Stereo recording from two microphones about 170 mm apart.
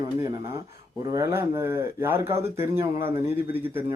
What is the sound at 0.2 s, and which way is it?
Speech, 20° right (ahead or behind).